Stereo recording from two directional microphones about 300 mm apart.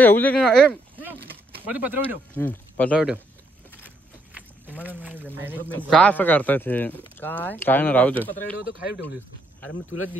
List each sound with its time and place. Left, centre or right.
0.0 s speech: centre
2.3 s speech: centre
4.3 s a sound: centre
4.8 s speech: centre
5.7 s speech: centre
8.5 s speech: left